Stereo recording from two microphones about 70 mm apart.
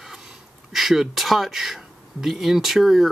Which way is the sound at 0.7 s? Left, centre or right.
Centre.